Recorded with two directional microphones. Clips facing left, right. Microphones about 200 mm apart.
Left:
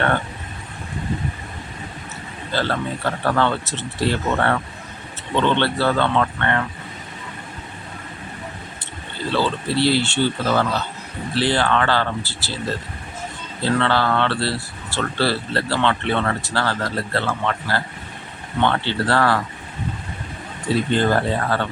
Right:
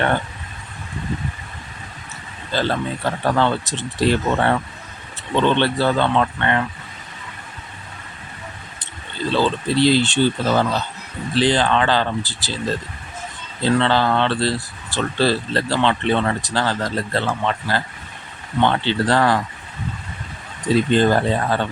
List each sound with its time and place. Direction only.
2.5 s speech: 15° right (ahead or behind)
9.3 s speech: 15° right (ahead or behind)
13.6 s speech: 20° right (ahead or behind)
20.7 s speech: 15° right (ahead or behind)